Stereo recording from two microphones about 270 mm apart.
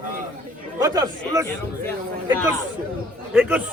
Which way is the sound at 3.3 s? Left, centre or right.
Centre.